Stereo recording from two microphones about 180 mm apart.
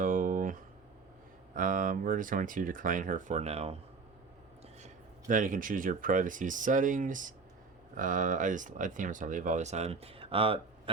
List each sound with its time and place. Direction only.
0.0 s a sound: 50° right (ahead or behind)
1.5 s speech: 50° right (ahead or behind)
5.3 s speech: 50° right (ahead or behind); by 10.6 s 30° right (ahead or behind)